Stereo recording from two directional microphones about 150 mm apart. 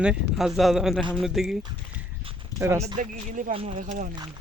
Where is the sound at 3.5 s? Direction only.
40° right (ahead or behind).